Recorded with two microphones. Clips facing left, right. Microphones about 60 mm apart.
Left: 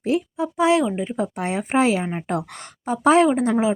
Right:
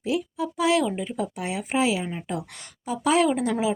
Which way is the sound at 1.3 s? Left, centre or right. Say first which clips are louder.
Left 6 dB; left.